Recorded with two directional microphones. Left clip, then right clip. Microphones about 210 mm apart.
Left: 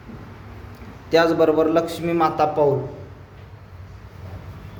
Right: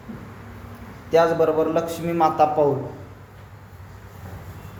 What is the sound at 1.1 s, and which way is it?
A man's voice, 25° left (ahead or behind).